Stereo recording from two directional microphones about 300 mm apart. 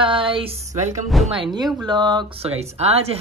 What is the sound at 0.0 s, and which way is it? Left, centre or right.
A woman's voice, centre.